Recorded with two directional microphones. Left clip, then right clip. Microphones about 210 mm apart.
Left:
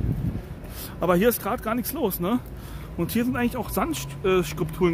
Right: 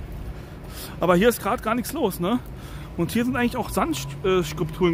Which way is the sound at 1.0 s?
15° right (ahead or behind).